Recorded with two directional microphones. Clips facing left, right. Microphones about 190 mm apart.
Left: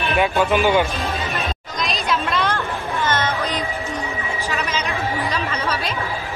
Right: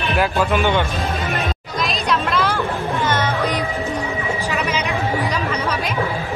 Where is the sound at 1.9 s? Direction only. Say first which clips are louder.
Right 1 dB; centre (ahead or behind).